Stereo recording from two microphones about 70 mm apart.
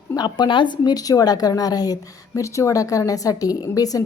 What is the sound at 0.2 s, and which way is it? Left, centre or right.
A woman's voice, left.